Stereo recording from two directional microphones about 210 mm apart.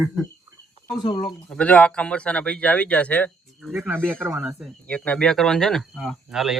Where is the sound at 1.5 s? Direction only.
5° left (ahead or behind).